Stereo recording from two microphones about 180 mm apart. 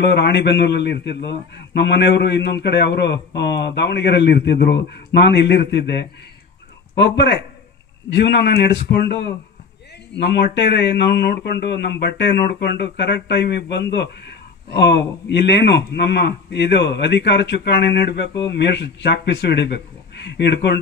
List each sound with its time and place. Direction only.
0.0 s a man's voice: 70° left (ahead or behind)